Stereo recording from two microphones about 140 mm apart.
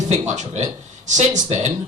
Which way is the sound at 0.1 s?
55° right (ahead or behind).